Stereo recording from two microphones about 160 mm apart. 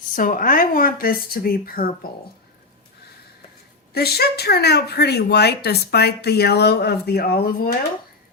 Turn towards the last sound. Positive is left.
turn(degrees=70)  # may be behind; listen again after turning